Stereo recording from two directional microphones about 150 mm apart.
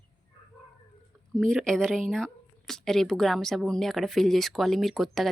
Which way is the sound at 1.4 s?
5° left (ahead or behind).